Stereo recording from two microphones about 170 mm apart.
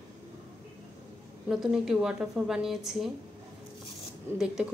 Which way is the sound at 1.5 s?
Centre (ahead or behind).